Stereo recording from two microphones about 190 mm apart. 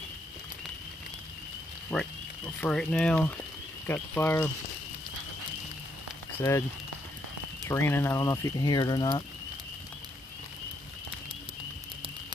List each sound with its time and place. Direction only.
1.9 s speech: 5° left (ahead or behind)
6.4 s speech: 15° left (ahead or behind)
7.7 s speech: 10° left (ahead or behind)